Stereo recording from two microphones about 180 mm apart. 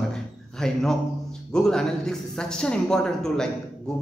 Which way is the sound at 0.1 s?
5° left (ahead or behind).